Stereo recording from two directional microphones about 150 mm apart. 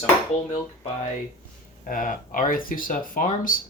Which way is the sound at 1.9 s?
65° left (ahead or behind).